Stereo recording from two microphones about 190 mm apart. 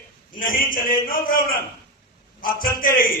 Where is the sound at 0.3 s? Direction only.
45° left (ahead or behind).